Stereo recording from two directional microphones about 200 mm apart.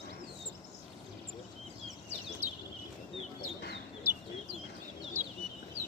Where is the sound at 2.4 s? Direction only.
35° right (ahead or behind).